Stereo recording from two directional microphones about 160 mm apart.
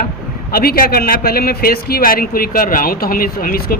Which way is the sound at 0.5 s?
70° left (ahead or behind).